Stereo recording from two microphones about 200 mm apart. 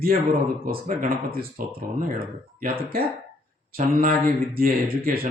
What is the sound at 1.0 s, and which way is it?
Speech, 45° right (ahead or behind).